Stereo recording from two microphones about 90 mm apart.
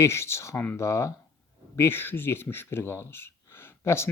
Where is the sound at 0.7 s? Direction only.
35° left (ahead or behind).